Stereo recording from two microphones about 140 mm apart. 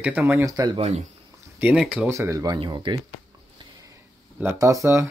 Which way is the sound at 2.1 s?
20° right (ahead or behind).